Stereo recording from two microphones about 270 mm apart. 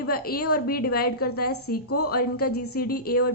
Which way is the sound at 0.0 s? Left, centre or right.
Left.